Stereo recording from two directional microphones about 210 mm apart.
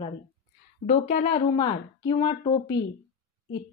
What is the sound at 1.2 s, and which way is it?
A woman's voice, 25° left (ahead or behind).